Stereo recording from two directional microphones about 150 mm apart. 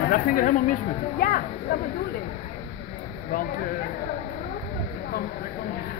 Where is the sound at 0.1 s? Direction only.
70° left (ahead or behind).